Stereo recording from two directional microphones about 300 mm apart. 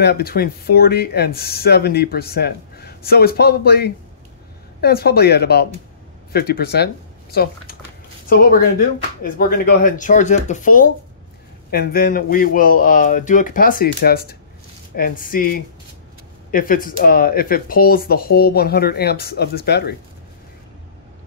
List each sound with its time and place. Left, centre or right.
0.0 s speech: left